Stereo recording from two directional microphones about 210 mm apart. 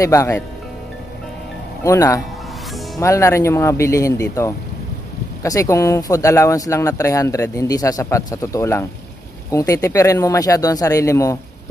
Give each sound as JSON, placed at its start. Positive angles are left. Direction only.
{"t": 0.0, "sound": "speech", "side_deg": 15}
{"t": 1.9, "sound": "speech", "side_deg": 15}